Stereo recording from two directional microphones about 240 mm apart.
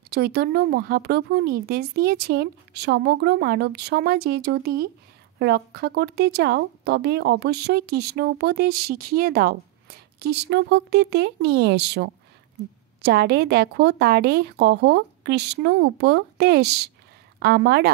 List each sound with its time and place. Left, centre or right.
0.1 s speech: right